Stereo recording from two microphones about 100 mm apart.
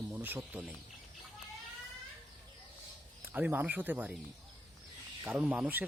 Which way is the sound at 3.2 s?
20° right (ahead or behind).